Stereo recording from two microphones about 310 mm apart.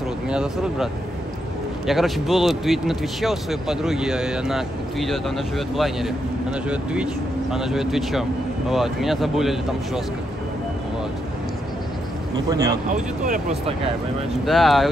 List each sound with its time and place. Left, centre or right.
0.3 s a man's voice: centre
1.9 s a man's voice: centre
12.4 s speech: centre
12.9 s speech: right
14.4 s a man's voice: centre